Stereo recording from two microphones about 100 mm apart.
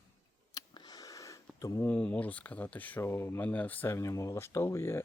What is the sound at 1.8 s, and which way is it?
Speech, 15° left (ahead or behind).